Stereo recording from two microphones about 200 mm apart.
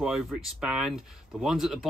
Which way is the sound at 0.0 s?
Centre (ahead or behind).